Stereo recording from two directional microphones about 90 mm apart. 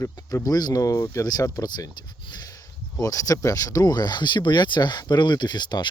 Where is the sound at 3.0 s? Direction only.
40° left (ahead or behind); by 5.8 s 55° left (ahead or behind).